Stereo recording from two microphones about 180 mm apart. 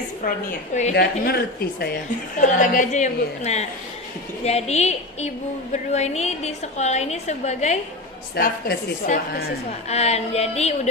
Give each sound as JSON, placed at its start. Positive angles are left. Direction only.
{"t": 0.9, "sound": "speech", "side_deg": 60}
{"t": 2.4, "sound": "a woman's voice", "side_deg": 45}
{"t": 8.4, "sound": "a woman's voice", "side_deg": 50}